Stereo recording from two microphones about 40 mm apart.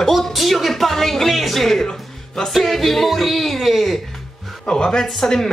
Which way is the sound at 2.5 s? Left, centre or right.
Centre.